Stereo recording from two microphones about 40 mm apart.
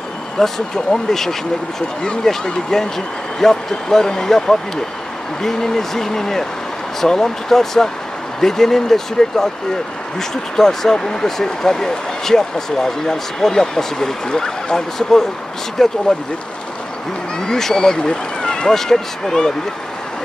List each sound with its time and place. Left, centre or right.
0.4 s speech: centre
0.9 s speech: left
2.4 s speech: centre
17.4 s speech: centre